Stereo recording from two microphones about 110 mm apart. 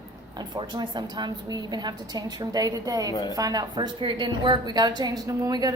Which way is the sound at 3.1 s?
35° left (ahead or behind).